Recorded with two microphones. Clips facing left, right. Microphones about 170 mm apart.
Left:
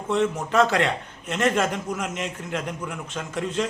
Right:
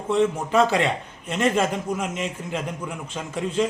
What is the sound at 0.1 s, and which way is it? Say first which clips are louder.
A man's voice: right 2 dB; 5° right (ahead or behind).